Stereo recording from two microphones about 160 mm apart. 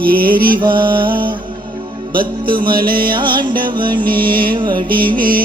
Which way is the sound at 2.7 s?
65° right (ahead or behind).